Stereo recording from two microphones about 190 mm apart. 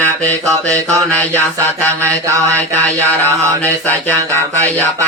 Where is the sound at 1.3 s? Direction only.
15° right (ahead or behind).